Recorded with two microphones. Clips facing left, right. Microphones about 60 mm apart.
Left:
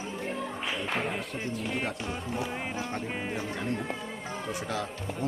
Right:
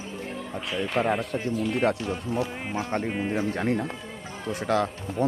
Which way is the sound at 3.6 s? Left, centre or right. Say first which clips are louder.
Right 6 dB; right.